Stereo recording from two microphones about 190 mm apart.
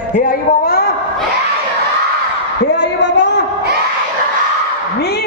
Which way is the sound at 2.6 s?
65° left (ahead or behind).